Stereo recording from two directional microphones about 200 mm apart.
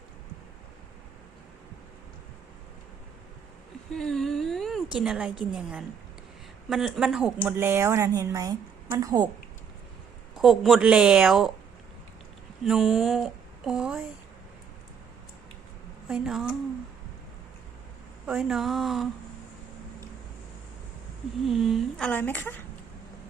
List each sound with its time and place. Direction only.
3.9 s a sound: centre (ahead or behind)
5.4 s speech: 5° right (ahead or behind)
10.3 s speech: centre (ahead or behind)
12.6 s speech: centre (ahead or behind)
16.0 s speech: centre (ahead or behind)
18.3 s speech: 5° right (ahead or behind)
21.4 s speech: centre (ahead or behind)